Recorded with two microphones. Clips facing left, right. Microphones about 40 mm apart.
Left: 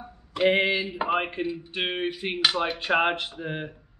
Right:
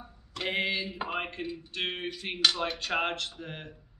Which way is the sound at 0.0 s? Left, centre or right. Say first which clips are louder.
Left 12 dB; left.